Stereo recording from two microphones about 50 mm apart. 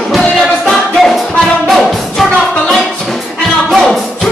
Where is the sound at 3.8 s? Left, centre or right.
Centre.